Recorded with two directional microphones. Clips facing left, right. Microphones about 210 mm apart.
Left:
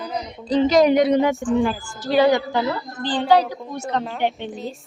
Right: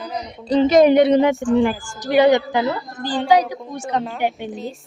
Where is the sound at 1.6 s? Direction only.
15° right (ahead or behind).